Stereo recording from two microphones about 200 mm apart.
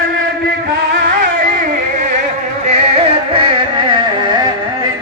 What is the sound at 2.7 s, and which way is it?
Music, 30° right (ahead or behind).